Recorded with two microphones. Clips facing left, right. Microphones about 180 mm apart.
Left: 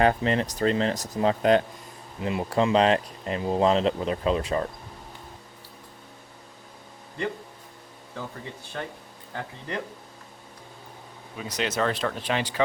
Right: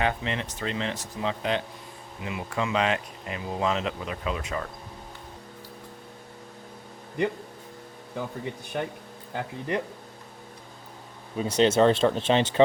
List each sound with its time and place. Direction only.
0.0 s speech: 40° left (ahead or behind)
2.2 s speech: 35° left (ahead or behind)
8.7 s speech: 15° right (ahead or behind)
11.3 s speech: 30° right (ahead or behind)